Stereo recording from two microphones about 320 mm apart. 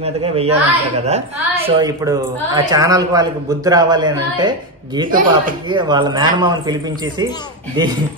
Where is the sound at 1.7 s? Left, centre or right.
Centre.